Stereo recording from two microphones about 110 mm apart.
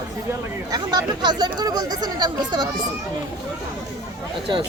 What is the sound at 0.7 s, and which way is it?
Speech, 40° right (ahead or behind).